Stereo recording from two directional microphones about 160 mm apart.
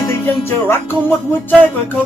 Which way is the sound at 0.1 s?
15° left (ahead or behind).